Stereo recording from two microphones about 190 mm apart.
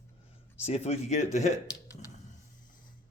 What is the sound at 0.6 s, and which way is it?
Speech, 35° left (ahead or behind).